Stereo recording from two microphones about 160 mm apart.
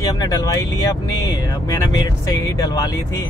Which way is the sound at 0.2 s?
20° left (ahead or behind).